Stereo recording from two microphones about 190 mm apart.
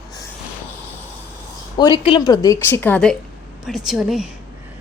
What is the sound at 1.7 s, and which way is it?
A woman's voice, 25° left (ahead or behind).